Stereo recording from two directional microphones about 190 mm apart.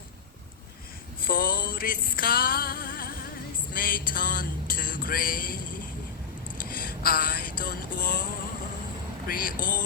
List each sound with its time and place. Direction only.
1.2 s music: 50° left (ahead or behind)
3.8 s a sound: 50° left (ahead or behind)
6.7 s vehicle: 50° left (ahead or behind)
9.2 s speech: 50° left (ahead or behind)